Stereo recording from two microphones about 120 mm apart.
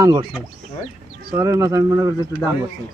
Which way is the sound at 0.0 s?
35° right (ahead or behind).